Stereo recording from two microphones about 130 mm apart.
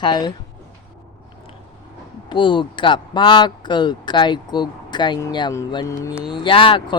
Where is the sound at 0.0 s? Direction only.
35° left (ahead or behind).